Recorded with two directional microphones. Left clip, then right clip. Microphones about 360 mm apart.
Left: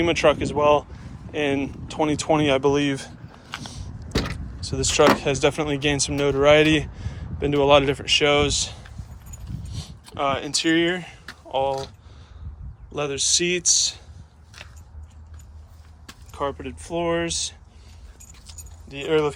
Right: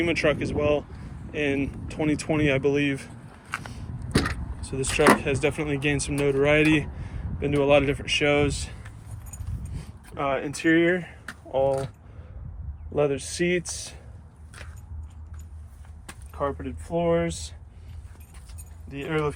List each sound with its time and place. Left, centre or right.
0.0 s speech: centre
4.7 s speech: centre
10.2 s speech: centre
12.9 s speech: centre
16.3 s speech: centre
18.9 s speech: centre